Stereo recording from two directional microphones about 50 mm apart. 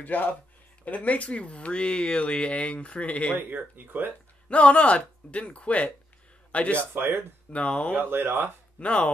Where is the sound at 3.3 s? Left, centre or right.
Right.